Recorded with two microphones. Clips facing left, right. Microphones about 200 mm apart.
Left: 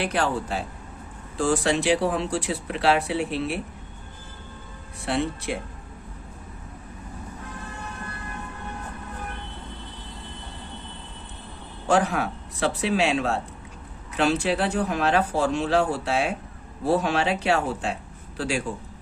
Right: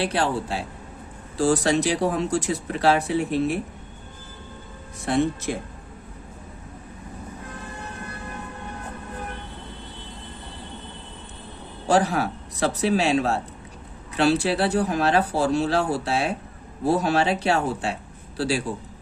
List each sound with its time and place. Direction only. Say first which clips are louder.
0.0 s speech: right 1 dB; 30° right (ahead or behind)
5.0 s speech: right 4 dB; 45° right (ahead or behind)
11.9 s speech: right 1 dB; 35° right (ahead or behind)